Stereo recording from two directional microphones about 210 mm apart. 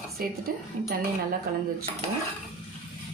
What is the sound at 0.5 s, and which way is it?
Speech, 45° right (ahead or behind).